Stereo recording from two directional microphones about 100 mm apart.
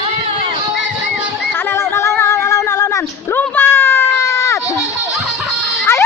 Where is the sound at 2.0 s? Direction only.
30° left (ahead or behind).